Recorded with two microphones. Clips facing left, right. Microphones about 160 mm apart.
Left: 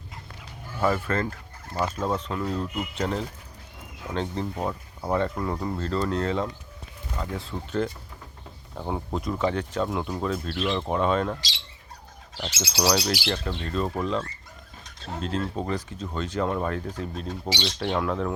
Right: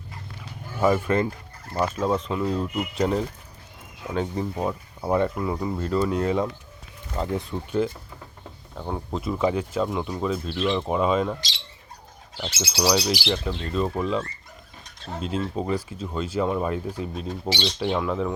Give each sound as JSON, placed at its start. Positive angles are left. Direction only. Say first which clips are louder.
{"t": 0.8, "sound": "speech", "louder": "right 4 dB", "side_deg": -15}
{"t": 2.0, "sound": "speech", "louder": "right 3 dB", "side_deg": -5}
{"t": 8.8, "sound": "speech", "louder": "even", "side_deg": 5}
{"t": 12.8, "sound": "speech", "louder": "right 2 dB", "side_deg": -5}